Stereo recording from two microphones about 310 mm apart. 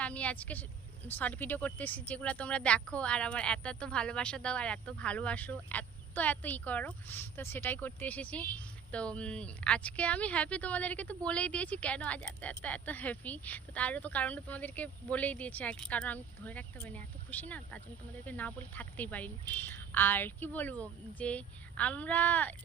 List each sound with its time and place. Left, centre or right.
0.0 s speech: centre